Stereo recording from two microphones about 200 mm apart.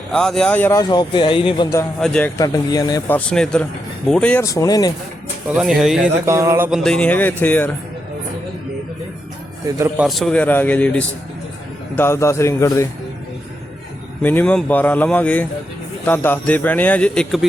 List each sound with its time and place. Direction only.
0.1 s speech: 5° left (ahead or behind); by 1.9 s 20° left (ahead or behind)
2.0 s speech: 5° left (ahead or behind)
2.4 s speech: 20° left (ahead or behind)
3.2 s speech: 5° left (ahead or behind)
5.5 s speech: centre (ahead or behind)
6.2 s speech: 15° right (ahead or behind)
6.7 s speech: centre (ahead or behind)
9.7 s speech: 15° right (ahead or behind)
10.1 s speech: centre (ahead or behind)
14.2 s speech: 10° left (ahead or behind)